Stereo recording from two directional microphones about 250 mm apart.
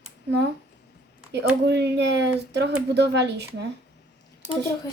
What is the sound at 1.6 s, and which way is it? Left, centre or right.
Speech, right.